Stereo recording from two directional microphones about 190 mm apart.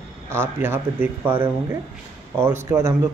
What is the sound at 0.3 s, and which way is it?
Speech, 10° right (ahead or behind).